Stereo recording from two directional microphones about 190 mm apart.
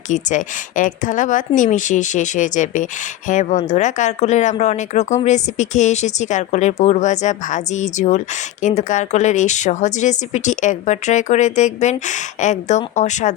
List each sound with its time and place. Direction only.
0.1 s speech: 40° left (ahead or behind)